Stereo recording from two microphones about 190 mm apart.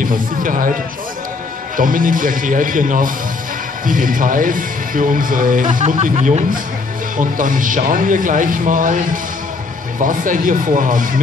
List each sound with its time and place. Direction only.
0.0 s speech: 45° right (ahead or behind)
1.8 s speech: 45° right (ahead or behind)